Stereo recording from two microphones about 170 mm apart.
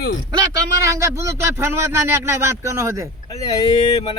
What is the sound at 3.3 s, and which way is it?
Speech, 20° left (ahead or behind).